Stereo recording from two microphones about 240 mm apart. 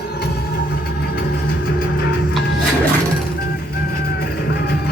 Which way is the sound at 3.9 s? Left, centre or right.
Left.